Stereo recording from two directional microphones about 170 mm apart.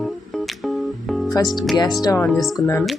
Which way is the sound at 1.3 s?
25° left (ahead or behind).